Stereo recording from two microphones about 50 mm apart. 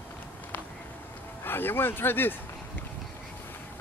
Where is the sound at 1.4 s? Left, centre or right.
Left.